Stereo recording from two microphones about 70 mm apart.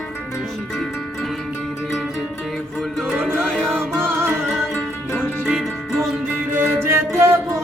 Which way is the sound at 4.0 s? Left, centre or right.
Right.